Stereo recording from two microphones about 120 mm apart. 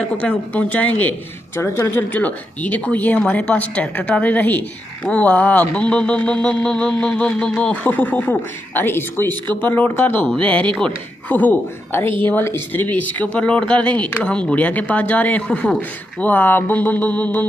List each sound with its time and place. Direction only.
0.2 s a man's voice: 15° left (ahead or behind)